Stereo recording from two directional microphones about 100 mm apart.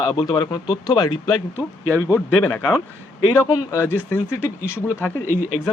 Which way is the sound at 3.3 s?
30° left (ahead or behind).